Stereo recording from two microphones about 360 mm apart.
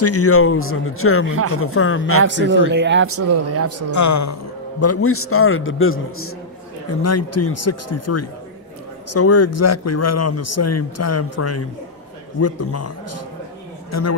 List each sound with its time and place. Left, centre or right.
0.0 s a man's voice: left
2.2 s speech: right
3.9 s a man's voice: left
4.8 s a man's voice: left